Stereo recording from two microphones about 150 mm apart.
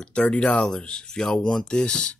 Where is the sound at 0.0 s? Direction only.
10° left (ahead or behind).